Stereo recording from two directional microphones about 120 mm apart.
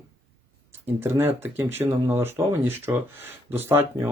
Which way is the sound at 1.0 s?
20° right (ahead or behind).